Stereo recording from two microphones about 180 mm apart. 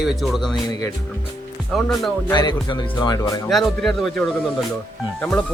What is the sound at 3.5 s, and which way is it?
Speech, centre (ahead or behind).